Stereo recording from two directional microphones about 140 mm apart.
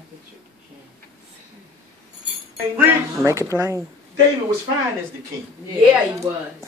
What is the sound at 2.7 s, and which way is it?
Speech, 20° right (ahead or behind).